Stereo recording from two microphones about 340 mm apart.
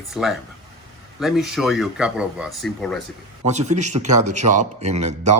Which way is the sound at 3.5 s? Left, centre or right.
Centre.